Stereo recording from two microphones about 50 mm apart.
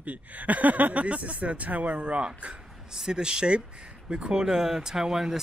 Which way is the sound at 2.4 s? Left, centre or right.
Right.